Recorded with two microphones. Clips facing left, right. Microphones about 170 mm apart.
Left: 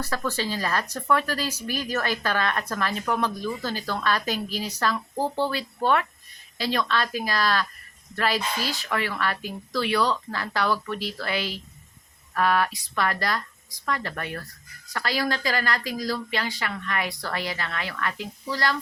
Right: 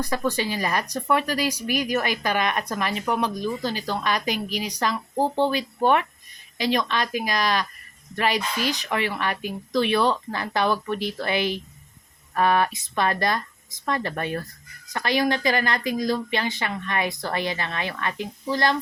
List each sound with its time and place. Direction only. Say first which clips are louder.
0.0 s speech: right 3 dB; 15° right (ahead or behind)